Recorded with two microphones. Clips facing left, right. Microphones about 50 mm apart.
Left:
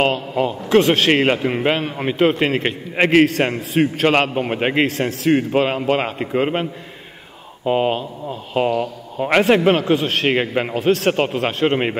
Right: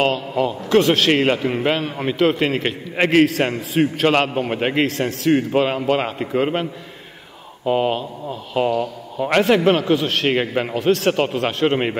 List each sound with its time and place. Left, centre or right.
0.5 s a man's voice: centre